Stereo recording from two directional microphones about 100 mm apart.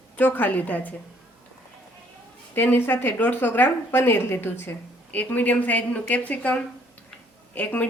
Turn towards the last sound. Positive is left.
turn(degrees=20)  # may be behind; listen again after turning